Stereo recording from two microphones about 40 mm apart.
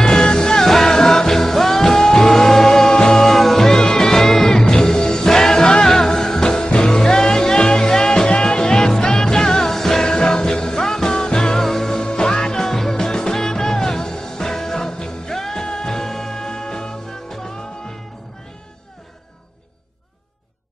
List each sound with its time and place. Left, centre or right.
0.0 s music: centre
12.6 s music: centre